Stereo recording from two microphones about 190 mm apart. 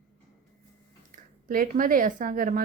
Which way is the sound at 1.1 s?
45° right (ahead or behind).